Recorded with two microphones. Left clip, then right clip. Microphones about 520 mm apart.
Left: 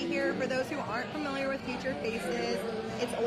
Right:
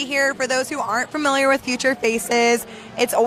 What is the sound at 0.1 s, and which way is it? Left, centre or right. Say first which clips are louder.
Speech: right 12 dB; right.